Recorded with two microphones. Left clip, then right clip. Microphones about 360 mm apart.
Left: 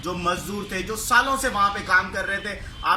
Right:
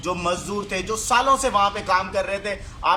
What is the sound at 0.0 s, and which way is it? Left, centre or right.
Speech, centre.